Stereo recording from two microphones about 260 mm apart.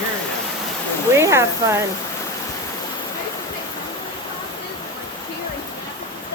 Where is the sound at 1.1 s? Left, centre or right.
Centre.